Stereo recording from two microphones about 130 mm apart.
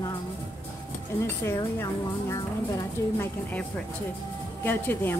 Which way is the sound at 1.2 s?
20° left (ahead or behind).